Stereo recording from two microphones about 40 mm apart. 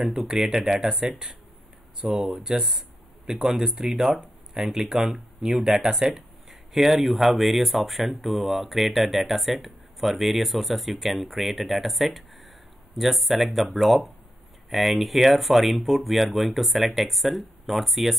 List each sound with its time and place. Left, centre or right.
0.0 s speech: centre
2.0 s speech: right
2.2 s speech: centre
6.0 s speech: centre